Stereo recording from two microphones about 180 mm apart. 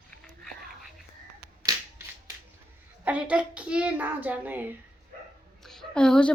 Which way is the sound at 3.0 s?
5° right (ahead or behind).